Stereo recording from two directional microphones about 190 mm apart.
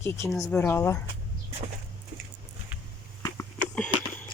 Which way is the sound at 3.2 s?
5° left (ahead or behind).